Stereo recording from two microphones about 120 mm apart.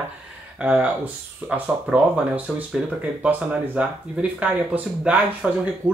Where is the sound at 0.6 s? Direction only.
10° right (ahead or behind).